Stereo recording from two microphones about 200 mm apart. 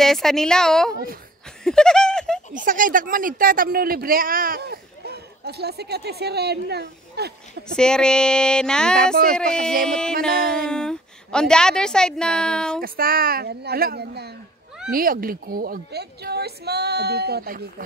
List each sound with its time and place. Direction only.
0.0 s a woman's voice: centre (ahead or behind)
1.6 s a sound: 5° left (ahead or behind)
2.5 s speech: 40° right (ahead or behind)
7.6 s a woman's voice: 5° left (ahead or behind)
12.8 s speech: 45° right (ahead or behind)